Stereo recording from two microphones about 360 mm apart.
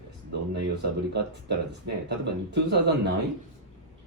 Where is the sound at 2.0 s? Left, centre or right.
Right.